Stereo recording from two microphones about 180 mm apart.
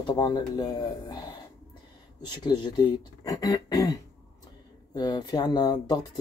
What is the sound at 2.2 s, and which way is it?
Speech, 25° left (ahead or behind).